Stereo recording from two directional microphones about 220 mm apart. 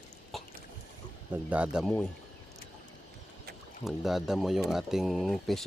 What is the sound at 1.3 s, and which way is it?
Speech, 5° right (ahead or behind).